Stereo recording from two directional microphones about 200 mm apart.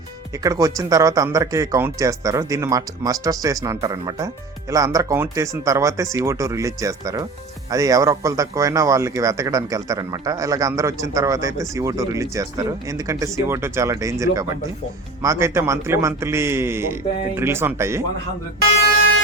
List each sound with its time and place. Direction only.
0.4 s a man's voice: 15° right (ahead or behind)